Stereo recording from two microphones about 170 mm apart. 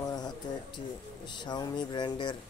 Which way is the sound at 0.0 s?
20° left (ahead or behind).